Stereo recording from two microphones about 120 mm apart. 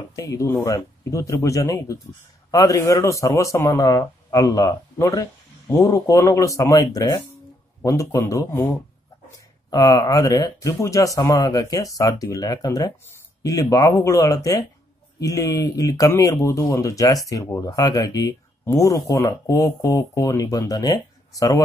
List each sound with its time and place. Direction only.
0.1 s speech: 25° left (ahead or behind)
9.7 s speech: 30° left (ahead or behind)